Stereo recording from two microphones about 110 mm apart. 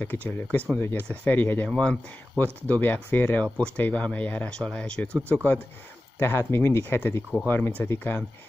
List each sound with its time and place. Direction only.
0.0 s speech: 15° left (ahead or behind)